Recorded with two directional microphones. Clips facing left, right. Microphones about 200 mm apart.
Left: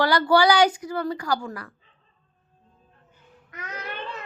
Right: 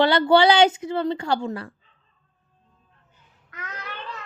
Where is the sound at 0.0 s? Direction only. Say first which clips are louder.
Right 3 dB; 25° right (ahead or behind).